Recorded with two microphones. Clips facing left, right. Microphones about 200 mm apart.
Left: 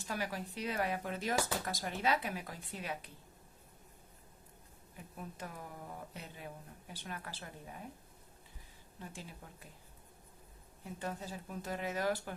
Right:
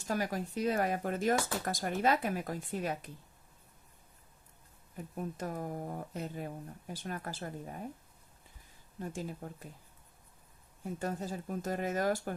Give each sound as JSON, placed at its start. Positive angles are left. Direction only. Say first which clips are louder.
{"t": 0.1, "sound": "speech", "louder": "right 6 dB", "side_deg": -45}
{"t": 4.9, "sound": "speech", "louder": "right 8 dB", "side_deg": -45}
{"t": 9.0, "sound": "speech", "louder": "right 10 dB", "side_deg": -45}
{"t": 11.0, "sound": "speech", "louder": "right 5 dB", "side_deg": -45}